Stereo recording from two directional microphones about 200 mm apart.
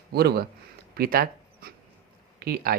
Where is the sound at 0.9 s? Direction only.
50° right (ahead or behind).